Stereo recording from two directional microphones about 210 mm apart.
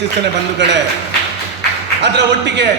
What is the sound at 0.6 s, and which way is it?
Speech, 55° right (ahead or behind).